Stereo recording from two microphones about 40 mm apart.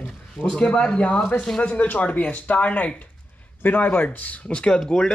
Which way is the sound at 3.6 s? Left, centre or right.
Left.